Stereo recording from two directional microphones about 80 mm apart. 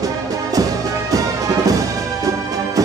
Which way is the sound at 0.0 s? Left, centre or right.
Right.